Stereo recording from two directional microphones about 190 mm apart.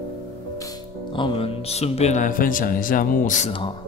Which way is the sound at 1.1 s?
25° left (ahead or behind).